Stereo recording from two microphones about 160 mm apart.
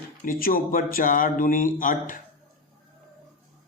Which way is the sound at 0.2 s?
60° left (ahead or behind).